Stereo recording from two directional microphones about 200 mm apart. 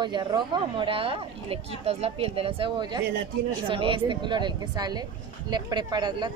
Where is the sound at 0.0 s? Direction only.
20° right (ahead or behind).